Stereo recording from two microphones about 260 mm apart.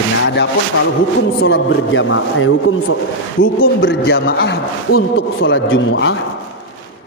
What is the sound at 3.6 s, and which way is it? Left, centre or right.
A man's voice, left.